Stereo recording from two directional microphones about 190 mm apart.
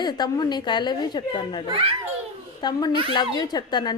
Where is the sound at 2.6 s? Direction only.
20° left (ahead or behind).